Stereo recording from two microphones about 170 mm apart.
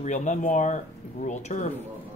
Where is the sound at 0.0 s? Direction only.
45° left (ahead or behind).